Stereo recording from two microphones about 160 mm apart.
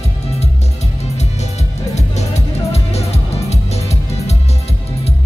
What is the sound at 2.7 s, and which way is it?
Music, 40° left (ahead or behind).